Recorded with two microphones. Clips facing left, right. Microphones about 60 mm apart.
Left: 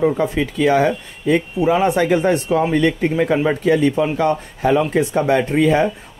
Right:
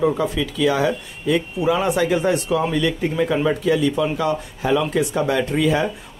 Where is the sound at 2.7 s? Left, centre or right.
Left.